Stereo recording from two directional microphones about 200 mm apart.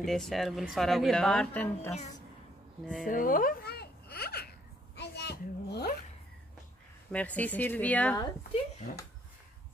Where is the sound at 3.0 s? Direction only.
45° left (ahead or behind).